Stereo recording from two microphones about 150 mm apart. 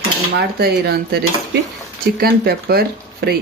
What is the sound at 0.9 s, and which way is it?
Speech, 90° right.